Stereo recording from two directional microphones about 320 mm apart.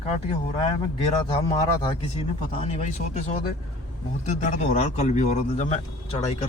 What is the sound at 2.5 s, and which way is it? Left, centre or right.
Speech, centre.